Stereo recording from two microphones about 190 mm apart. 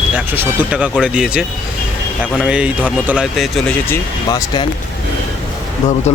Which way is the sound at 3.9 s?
20° left (ahead or behind).